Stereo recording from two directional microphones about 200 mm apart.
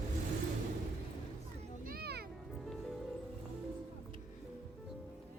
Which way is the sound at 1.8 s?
50° right (ahead or behind).